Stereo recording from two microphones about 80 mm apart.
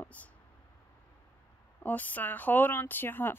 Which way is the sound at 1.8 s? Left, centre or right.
Left.